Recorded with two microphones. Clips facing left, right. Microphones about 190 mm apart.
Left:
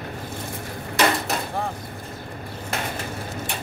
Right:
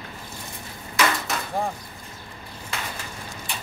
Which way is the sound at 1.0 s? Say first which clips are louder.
Left 3 dB; 35° left (ahead or behind).